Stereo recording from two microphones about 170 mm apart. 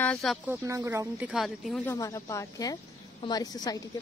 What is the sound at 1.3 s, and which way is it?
Speech, centre (ahead or behind).